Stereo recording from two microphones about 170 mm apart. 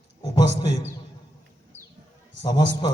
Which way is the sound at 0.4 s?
40° right (ahead or behind).